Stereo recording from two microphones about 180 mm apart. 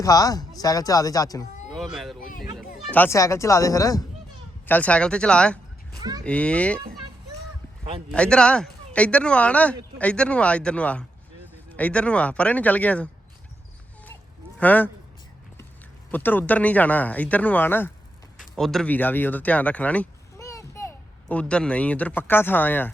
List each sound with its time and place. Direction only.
0.0 s speech: 20° left (ahead or behind)
1.7 s speech: centre (ahead or behind)
2.2 s a child's voice: 50° left (ahead or behind)
2.9 s speech: 10° left (ahead or behind)
6.0 s cattle: 20° right (ahead or behind)
6.2 s speech: 5° left (ahead or behind)
8.1 s speech: 5° left (ahead or behind)
14.6 s speech: 10° left (ahead or behind)
16.1 s speech: 10° left (ahead or behind)